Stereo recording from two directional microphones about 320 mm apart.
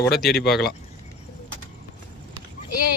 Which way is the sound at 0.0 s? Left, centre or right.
Centre.